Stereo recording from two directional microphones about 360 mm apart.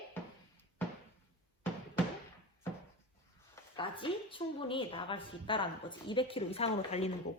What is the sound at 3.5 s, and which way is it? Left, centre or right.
A woman's voice, centre.